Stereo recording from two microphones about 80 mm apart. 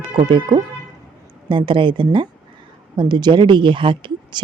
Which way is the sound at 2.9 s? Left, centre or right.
Right.